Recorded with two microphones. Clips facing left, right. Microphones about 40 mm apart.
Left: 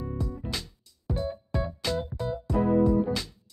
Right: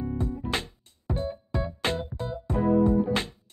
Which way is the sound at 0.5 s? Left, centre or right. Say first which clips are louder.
Right 5 dB; right.